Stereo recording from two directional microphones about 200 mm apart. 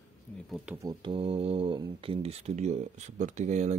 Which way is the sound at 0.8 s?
20° right (ahead or behind).